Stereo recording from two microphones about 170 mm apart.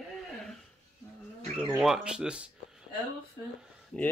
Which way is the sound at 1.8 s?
5° right (ahead or behind).